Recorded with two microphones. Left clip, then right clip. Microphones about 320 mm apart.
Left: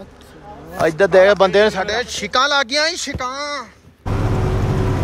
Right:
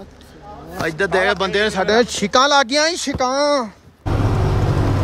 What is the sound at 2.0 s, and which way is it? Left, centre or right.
Speech, centre.